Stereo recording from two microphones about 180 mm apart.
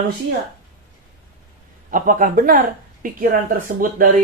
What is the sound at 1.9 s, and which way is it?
Speech, 50° right (ahead or behind).